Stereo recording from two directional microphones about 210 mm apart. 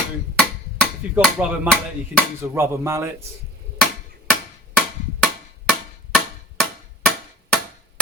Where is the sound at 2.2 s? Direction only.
10° right (ahead or behind).